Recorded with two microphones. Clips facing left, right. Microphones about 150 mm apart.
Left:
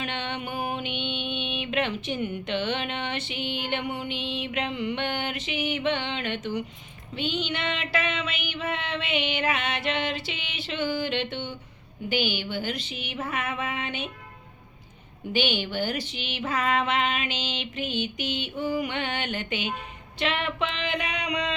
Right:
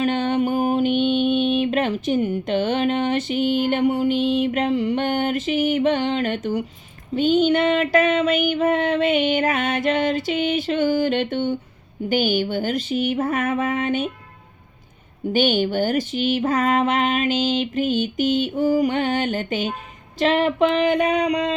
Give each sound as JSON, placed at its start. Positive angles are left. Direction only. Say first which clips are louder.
{"t": 0.0, "sound": "mantra", "louder": "right 12 dB", "side_deg": -40}
{"t": 15.3, "sound": "mantra", "louder": "right 8 dB", "side_deg": -45}